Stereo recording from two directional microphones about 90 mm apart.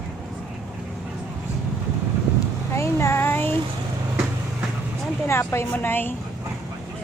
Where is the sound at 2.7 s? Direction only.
30° left (ahead or behind).